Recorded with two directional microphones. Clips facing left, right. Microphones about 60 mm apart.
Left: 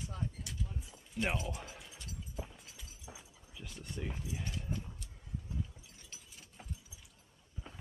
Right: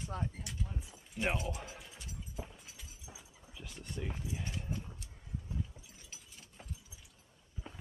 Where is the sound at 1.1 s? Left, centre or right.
Centre.